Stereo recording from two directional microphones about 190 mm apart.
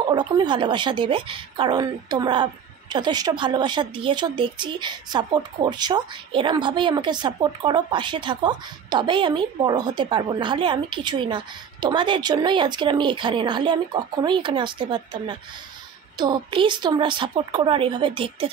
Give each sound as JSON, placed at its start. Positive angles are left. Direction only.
{"t": 0.1, "sound": "speech", "side_deg": -25}